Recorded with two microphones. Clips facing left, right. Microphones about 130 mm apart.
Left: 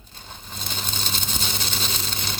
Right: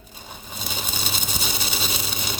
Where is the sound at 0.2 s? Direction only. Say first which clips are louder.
Right 2 dB; 10° right (ahead or behind).